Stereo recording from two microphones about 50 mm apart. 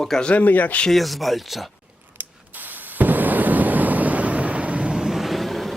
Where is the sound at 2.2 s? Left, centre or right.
Right.